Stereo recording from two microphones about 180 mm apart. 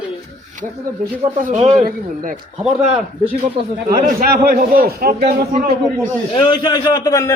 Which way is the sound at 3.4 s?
55° right (ahead or behind).